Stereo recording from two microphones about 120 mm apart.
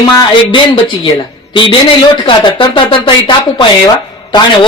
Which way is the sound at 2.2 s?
40° left (ahead or behind).